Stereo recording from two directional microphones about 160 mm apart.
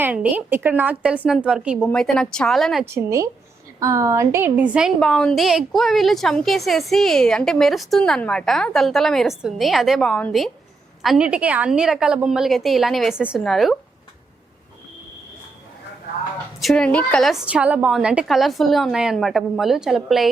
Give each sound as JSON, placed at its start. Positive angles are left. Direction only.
{"t": 0.0, "sound": "a woman's voice", "side_deg": -10}
{"t": 2.8, "sound": "a woman's voice", "side_deg": -15}
{"t": 4.9, "sound": "a woman's voice", "side_deg": 5}
{"t": 16.6, "sound": "a woman's voice", "side_deg": 5}